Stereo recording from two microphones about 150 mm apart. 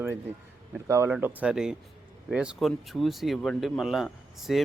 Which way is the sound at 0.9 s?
15° right (ahead or behind).